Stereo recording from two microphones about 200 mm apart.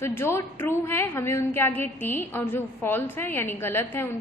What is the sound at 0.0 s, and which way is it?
A woman's voice, 10° left (ahead or behind).